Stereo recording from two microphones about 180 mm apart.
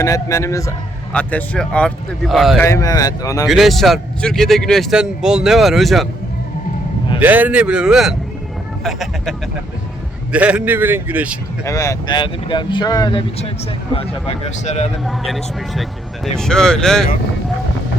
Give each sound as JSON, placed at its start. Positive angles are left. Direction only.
{"t": 0.0, "sound": "a man's voice", "side_deg": 15}
{"t": 2.6, "sound": "speech", "side_deg": 15}
{"t": 3.4, "sound": "a man's voice", "side_deg": 0}
{"t": 7.2, "sound": "a man's voice", "side_deg": -10}
{"t": 10.3, "sound": "a man's voice", "side_deg": -5}
{"t": 11.6, "sound": "speech", "side_deg": 15}
{"t": 15.0, "sound": "a man's voice", "side_deg": 0}